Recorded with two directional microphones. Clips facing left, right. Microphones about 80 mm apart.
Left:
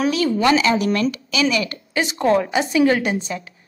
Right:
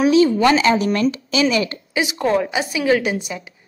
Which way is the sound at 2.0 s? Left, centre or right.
Centre.